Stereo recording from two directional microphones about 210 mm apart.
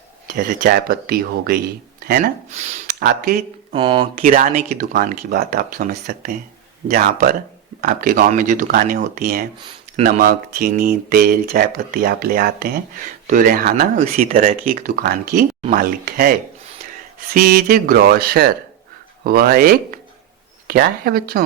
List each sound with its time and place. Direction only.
0.3 s speech: 45° right (ahead or behind)
3.7 s speech: 25° right (ahead or behind)
4.2 s speech: 40° right (ahead or behind)
17.3 s speech: 40° right (ahead or behind)